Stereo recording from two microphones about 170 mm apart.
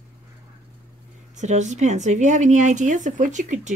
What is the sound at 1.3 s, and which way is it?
Speech, 45° right (ahead or behind).